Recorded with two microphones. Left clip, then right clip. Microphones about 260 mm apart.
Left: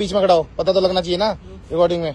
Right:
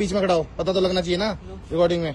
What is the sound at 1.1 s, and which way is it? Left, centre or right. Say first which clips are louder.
Speech: left 5 dB; centre.